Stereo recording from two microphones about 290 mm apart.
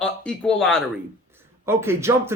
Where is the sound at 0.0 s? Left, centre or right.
Centre.